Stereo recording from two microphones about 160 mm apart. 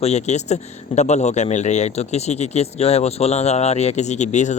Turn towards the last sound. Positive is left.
turn(degrees=45)  # may be behind; listen again after turning